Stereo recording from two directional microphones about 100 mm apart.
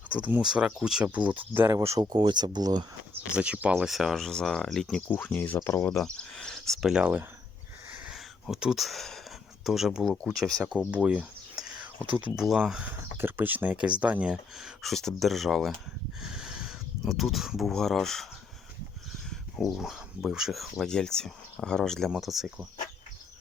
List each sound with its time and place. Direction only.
0.1 s speech: 15° right (ahead or behind)
1.7 s speech: 30° right (ahead or behind)
2.0 s speech: 45° right (ahead or behind)
3.3 s speech: 10° right (ahead or behind)
3.8 s speech: centre (ahead or behind)
5.0 s speech: 15° left (ahead or behind)
6.0 s speech: 5° left (ahead or behind)
6.9 s speech: 15° right (ahead or behind)
8.0 s a sound: 5° right (ahead or behind)
9.6 s speech: 5° right (ahead or behind)
10.9 s a sound: 15° right (ahead or behind)
12.1 s speech: 10° right (ahead or behind)
13.1 s speech: 20° right (ahead or behind); by 18.3 s 5° left (ahead or behind)
19.7 s speech: 5° right (ahead or behind)